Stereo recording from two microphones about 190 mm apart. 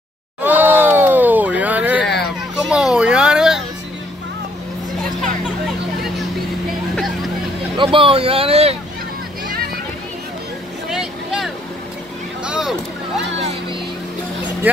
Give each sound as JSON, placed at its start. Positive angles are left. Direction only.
{"t": 0.4, "sound": "a sound", "side_deg": -10}
{"t": 7.7, "sound": "vehicle", "side_deg": -25}
{"t": 10.9, "sound": "vehicle", "side_deg": 0}